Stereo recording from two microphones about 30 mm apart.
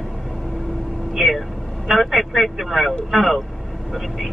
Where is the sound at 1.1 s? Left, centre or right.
Centre.